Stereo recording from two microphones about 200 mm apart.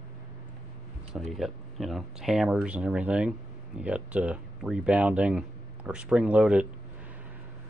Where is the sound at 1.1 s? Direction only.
Centre (ahead or behind).